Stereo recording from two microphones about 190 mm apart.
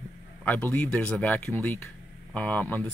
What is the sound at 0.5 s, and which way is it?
Speech, 10° left (ahead or behind).